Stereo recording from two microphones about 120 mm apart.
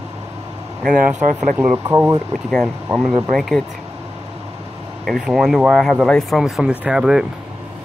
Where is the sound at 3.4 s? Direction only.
Centre (ahead or behind).